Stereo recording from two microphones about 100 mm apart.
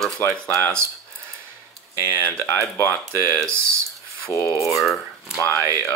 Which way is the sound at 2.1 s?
15° left (ahead or behind).